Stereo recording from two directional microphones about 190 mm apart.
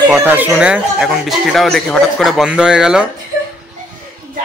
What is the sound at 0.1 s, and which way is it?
Speech, 10° right (ahead or behind).